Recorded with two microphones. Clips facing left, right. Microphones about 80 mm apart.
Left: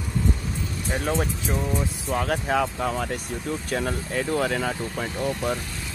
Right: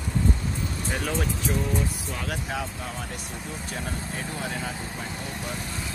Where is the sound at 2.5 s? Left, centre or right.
Left.